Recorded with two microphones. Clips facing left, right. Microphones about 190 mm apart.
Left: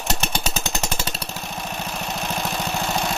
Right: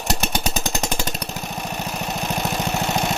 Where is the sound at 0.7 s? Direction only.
15° right (ahead or behind).